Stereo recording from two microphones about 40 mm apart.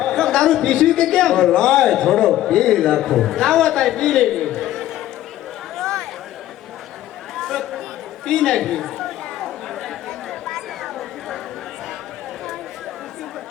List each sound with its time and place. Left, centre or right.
0.0 s speech: centre
4.5 s chatter: centre
5.7 s a sound: centre
7.3 s chatter: centre